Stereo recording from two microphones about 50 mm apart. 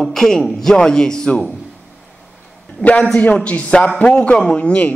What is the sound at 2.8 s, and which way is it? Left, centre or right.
A man's voice, left.